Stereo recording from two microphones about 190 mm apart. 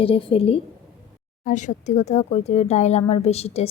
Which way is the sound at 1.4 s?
40° left (ahead or behind).